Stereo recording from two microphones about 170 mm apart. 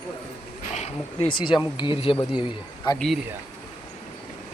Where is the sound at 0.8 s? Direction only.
35° left (ahead or behind).